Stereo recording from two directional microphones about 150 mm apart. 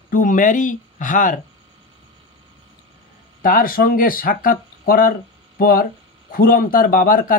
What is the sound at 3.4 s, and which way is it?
Speech, 70° left (ahead or behind).